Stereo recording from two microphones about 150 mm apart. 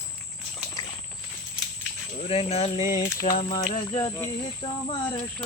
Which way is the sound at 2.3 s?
40° left (ahead or behind).